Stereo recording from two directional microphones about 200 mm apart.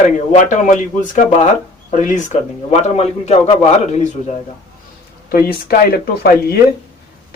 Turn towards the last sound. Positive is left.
turn(degrees=50)  # may be behind; listen again after turning